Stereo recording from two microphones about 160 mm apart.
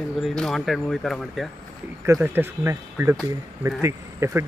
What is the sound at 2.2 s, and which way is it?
Speech, 15° right (ahead or behind).